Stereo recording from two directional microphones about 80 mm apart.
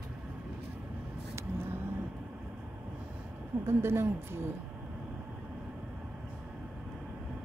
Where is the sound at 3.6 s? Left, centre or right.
Right.